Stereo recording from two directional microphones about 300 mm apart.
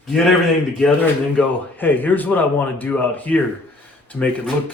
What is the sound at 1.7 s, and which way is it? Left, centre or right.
Speech, centre.